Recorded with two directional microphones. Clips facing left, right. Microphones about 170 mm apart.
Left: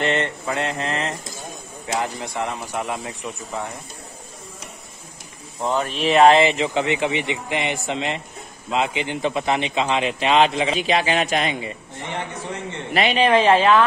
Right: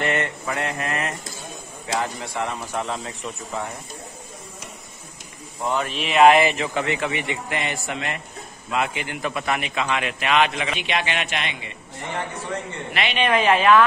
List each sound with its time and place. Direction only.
0.0 s a man's voice: 25° left (ahead or behind)
5.8 s a man's voice: 35° left (ahead or behind)
12.9 s a woman's voice: 35° left (ahead or behind)